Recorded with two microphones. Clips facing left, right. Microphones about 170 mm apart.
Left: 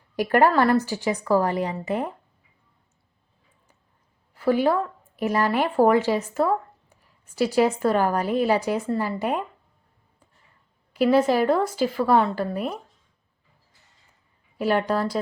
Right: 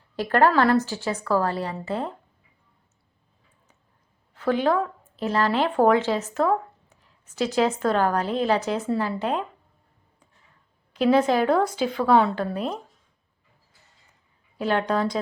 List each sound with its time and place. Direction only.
0.2 s a woman's voice: 10° left (ahead or behind)
4.4 s a woman's voice: 10° left (ahead or behind)
10.9 s a woman's voice: 5° left (ahead or behind)
14.6 s a woman's voice: 5° left (ahead or behind)